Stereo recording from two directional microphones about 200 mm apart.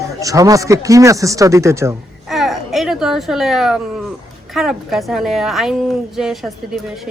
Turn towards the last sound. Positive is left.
turn(degrees=0)  # may be behind; listen again after turning